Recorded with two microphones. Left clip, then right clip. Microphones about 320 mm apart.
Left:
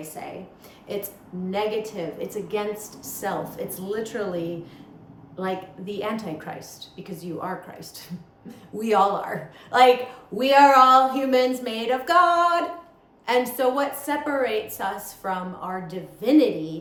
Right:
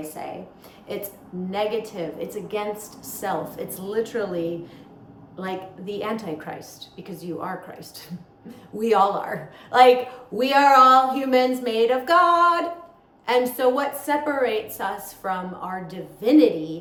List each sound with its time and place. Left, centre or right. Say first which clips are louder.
0.2 s speech: right 2 dB; centre